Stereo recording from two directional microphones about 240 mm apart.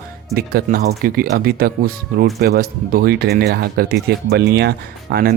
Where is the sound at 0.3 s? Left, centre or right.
Right.